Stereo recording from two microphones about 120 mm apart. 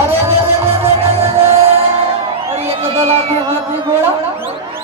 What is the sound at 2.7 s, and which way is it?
Crowd, 55° right (ahead or behind).